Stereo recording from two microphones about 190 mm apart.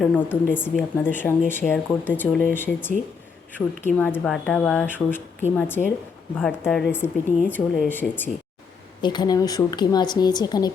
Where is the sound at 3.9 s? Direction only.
10° left (ahead or behind).